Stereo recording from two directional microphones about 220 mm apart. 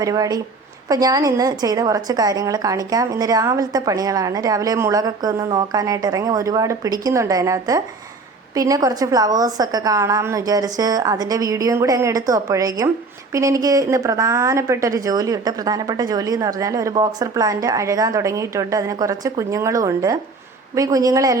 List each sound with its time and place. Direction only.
0.0 s a woman's voice: 15° right (ahead or behind)